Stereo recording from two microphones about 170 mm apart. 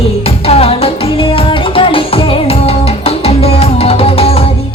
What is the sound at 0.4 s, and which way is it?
Music, 35° left (ahead or behind).